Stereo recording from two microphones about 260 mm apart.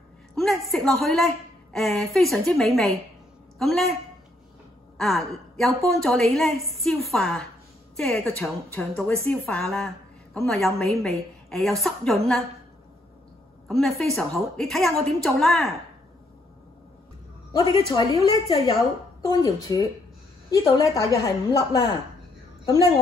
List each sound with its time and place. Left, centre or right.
0.4 s a woman's voice: centre
4.9 s a woman's voice: centre
13.7 s a woman's voice: centre
17.5 s a woman's voice: centre